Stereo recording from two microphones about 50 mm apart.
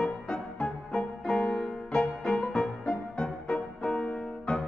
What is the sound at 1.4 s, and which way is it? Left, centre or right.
Music, centre.